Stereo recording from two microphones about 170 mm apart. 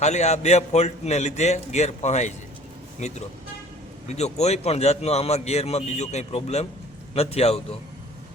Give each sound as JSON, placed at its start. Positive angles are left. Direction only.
{"t": 0.0, "sound": "a man's voice", "side_deg": 40}
{"t": 4.1, "sound": "a man's voice", "side_deg": 40}